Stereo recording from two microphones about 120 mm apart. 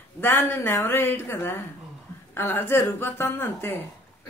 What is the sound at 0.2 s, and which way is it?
A man's voice, 20° left (ahead or behind).